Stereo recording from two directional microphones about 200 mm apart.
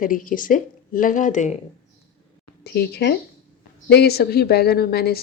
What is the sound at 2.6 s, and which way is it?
A woman's voice, 55° left (ahead or behind).